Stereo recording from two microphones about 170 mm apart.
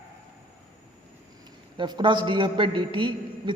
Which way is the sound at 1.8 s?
30° right (ahead or behind).